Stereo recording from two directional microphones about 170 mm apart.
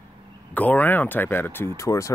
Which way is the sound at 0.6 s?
10° left (ahead or behind).